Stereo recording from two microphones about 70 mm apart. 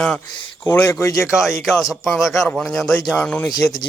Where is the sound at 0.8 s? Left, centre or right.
Left.